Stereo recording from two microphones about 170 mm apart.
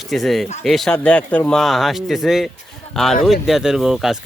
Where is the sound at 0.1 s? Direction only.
Centre (ahead or behind).